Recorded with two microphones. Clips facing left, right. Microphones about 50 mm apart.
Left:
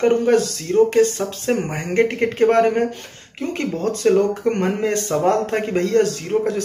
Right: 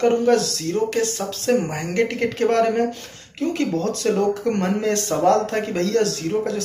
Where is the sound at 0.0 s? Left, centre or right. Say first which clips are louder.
Left 1 dB; left.